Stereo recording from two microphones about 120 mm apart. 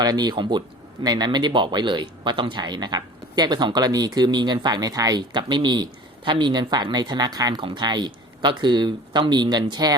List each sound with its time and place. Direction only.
0.0 s speech: 35° right (ahead or behind)